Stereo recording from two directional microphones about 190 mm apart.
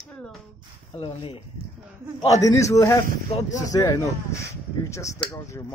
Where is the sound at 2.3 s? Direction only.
15° left (ahead or behind).